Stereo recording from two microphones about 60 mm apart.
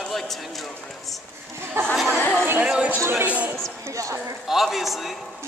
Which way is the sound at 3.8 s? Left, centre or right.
Right.